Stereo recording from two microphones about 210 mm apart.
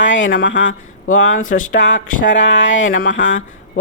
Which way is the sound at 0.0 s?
60° left (ahead or behind).